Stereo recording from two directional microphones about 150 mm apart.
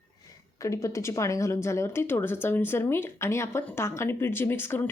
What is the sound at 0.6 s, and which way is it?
Speech, 20° left (ahead or behind).